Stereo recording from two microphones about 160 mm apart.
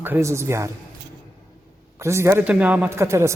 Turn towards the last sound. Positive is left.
turn(degrees=-15)  # may be behind; listen again after turning